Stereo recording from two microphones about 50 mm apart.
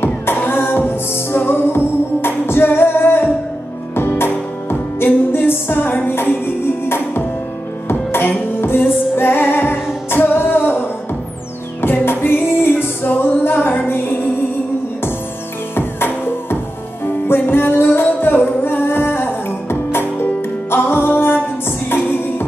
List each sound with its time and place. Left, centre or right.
0.0 s music: left
11.8 s music: left
15.7 s music: left